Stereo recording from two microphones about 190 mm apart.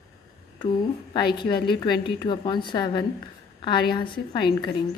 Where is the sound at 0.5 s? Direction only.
25° left (ahead or behind).